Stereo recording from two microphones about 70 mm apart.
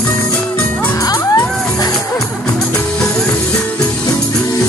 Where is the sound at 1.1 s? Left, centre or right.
Left.